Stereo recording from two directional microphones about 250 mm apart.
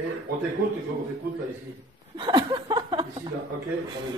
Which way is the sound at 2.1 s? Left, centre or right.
Centre.